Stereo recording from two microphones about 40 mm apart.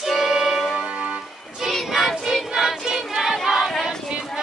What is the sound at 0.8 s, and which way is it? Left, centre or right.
Music, right.